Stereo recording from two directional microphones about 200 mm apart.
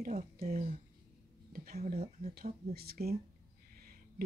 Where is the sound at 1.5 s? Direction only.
45° right (ahead or behind).